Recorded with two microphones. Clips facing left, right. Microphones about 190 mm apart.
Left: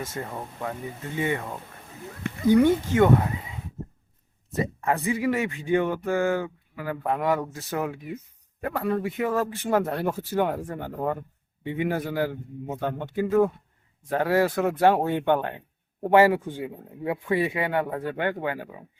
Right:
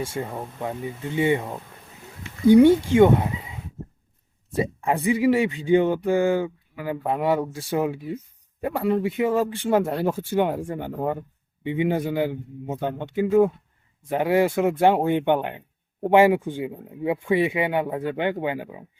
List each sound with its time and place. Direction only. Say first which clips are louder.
0.2 s speech: right 3 dB; 15° right (ahead or behind)
2.3 s a sound: left 14 dB; 55° left (ahead or behind)
2.6 s speech: right 5 dB; 30° right (ahead or behind)
4.5 s speech: right 2 dB; 15° right (ahead or behind)